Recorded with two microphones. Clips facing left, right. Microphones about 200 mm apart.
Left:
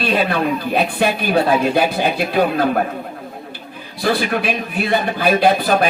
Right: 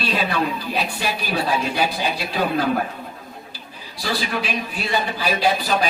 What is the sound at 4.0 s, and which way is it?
A man's voice, 55° left (ahead or behind).